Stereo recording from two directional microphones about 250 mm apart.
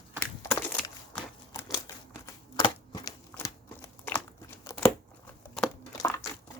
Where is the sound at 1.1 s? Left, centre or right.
Centre.